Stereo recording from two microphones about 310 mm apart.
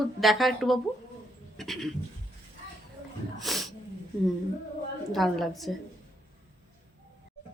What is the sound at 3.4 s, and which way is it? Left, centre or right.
Speech, centre.